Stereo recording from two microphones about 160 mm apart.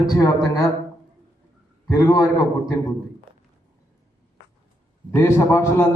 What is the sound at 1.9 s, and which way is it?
Speech, 20° left (ahead or behind).